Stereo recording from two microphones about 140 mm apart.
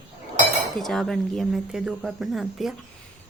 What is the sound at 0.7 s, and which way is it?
Speech, 5° left (ahead or behind).